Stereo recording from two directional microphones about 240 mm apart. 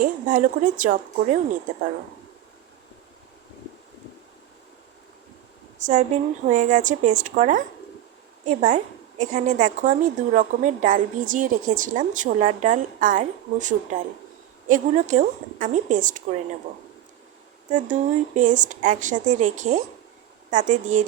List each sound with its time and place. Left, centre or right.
0.0 s a woman's voice: right
5.8 s a woman's voice: right
8.6 s a woman's voice: right
17.7 s a woman's voice: right